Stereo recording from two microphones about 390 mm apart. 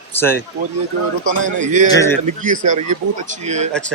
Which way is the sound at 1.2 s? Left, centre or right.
Centre.